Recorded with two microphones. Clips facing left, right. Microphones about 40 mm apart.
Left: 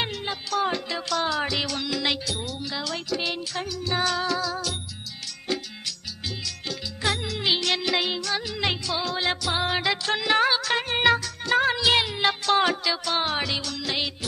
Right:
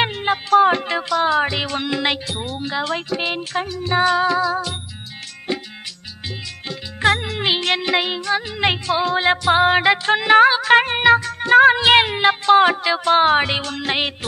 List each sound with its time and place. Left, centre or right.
0.0 s music: right
1.0 s speech: right
5.5 s music: right
7.0 s music: right
12.2 s music: right